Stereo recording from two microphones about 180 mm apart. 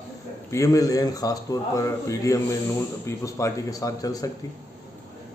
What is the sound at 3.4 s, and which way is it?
Speech, 20° left (ahead or behind).